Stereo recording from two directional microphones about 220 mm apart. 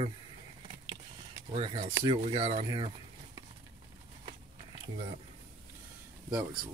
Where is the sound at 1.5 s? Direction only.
25° right (ahead or behind).